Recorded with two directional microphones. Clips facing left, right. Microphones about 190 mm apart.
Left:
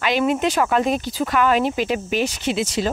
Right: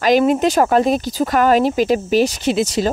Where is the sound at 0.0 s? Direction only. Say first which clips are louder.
Right 6 dB; 40° right (ahead or behind).